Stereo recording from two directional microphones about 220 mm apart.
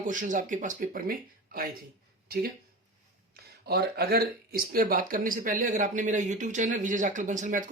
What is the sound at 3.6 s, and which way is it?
Speech, 45° right (ahead or behind).